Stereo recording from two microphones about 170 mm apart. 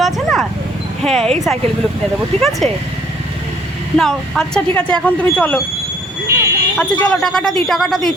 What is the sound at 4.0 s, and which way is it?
Speech, centre (ahead or behind).